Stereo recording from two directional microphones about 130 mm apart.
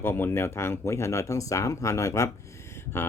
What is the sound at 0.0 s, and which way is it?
Speech, 15° left (ahead or behind).